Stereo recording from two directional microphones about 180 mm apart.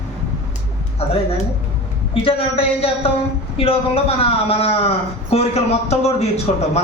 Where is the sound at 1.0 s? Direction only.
35° left (ahead or behind).